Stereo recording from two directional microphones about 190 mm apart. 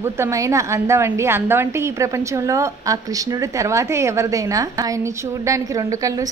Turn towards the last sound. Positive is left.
turn(degrees=-15)  # may be behind; listen again after turning